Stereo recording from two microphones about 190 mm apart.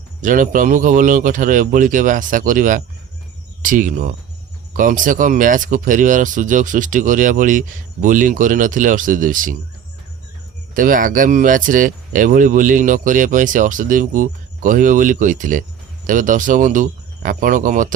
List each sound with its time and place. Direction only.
0.2 s speech: 45° right (ahead or behind)
10.8 s speech: 45° right (ahead or behind)